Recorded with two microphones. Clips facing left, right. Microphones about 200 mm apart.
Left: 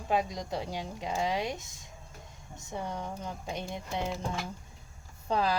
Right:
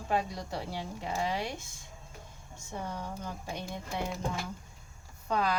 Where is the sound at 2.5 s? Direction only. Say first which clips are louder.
Left 2 dB; 15° left (ahead or behind).